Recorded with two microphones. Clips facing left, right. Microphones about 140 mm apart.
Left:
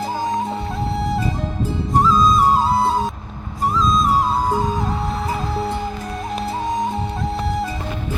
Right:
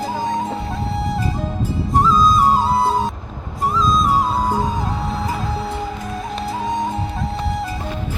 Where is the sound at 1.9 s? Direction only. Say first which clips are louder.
Even; centre (ahead or behind).